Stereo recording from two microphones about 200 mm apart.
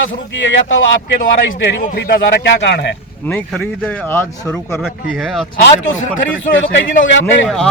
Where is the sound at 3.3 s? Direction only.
10° left (ahead or behind).